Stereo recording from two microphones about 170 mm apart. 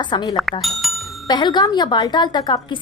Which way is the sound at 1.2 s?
25° left (ahead or behind).